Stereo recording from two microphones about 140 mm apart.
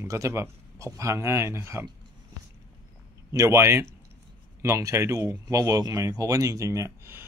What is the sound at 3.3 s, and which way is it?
Speech, 20° right (ahead or behind).